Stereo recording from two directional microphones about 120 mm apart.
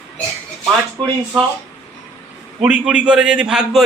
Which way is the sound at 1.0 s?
45° right (ahead or behind).